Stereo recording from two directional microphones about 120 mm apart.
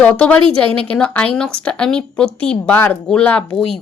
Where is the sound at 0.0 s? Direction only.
10° left (ahead or behind).